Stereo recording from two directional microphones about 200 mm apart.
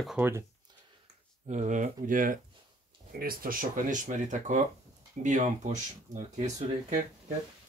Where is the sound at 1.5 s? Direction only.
35° right (ahead or behind).